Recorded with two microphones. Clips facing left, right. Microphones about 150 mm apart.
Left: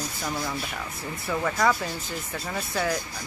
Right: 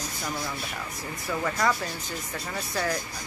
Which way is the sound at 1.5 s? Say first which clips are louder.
Left 3 dB; 5° left (ahead or behind).